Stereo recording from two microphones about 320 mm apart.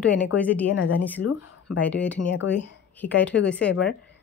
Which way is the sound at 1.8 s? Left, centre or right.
Centre.